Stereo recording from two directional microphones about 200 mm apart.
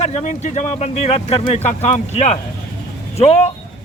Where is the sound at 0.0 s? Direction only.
35° left (ahead or behind).